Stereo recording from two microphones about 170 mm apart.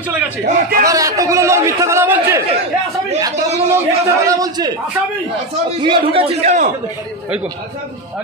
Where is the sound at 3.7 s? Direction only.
20° right (ahead or behind); by 6.7 s 45° right (ahead or behind).